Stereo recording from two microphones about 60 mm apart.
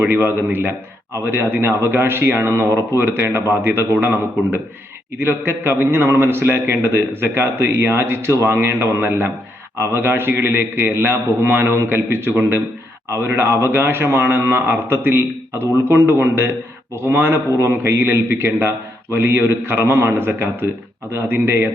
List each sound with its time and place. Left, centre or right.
0.0 s a man's voice: right
9.7 s a man's voice: right
10.0 s a man's voice: right
17.6 s a man's voice: right